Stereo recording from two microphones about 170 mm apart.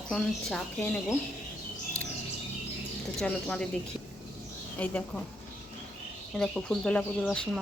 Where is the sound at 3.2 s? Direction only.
5° left (ahead or behind).